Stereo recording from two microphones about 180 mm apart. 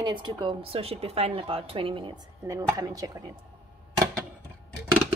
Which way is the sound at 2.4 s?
20° right (ahead or behind).